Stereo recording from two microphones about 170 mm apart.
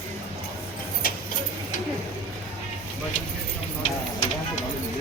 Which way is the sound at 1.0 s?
60° left (ahead or behind).